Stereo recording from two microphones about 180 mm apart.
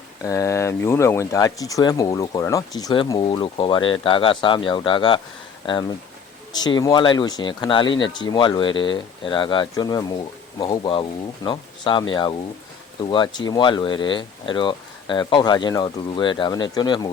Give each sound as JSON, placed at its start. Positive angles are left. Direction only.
{"t": 0.2, "sound": "speech", "side_deg": 15}
{"t": 6.5, "sound": "speech", "side_deg": 25}
{"t": 13.1, "sound": "speech", "side_deg": 25}